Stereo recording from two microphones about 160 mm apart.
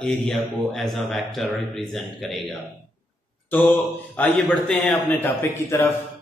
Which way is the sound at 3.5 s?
10° left (ahead or behind).